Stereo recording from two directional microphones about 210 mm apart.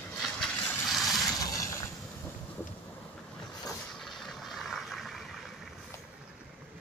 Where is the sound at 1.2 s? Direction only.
15° left (ahead or behind).